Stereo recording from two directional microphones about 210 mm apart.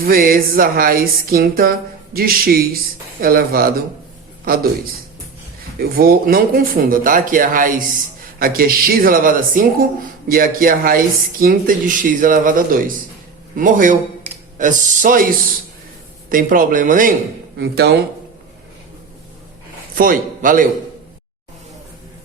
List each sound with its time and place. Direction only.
0.0 s speech: 45° right (ahead or behind)
5.8 s speech: 45° right (ahead or behind)
20.0 s speech: 40° right (ahead or behind)